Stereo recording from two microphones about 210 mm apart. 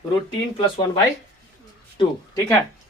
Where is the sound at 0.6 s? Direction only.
25° left (ahead or behind).